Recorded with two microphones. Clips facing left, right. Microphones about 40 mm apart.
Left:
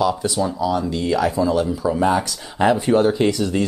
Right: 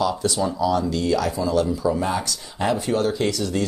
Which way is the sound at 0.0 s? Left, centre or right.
Centre.